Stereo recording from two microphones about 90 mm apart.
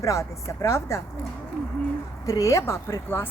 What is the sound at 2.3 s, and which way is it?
Speech, 40° left (ahead or behind).